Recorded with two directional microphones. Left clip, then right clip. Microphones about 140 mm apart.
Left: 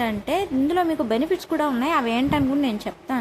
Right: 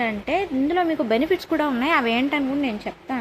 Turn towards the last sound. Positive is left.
turn(degrees=15)  # may be behind; listen again after turning